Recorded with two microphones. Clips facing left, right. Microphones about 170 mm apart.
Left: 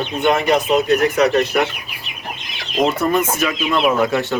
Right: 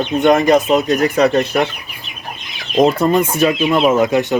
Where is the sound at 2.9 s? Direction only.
30° right (ahead or behind).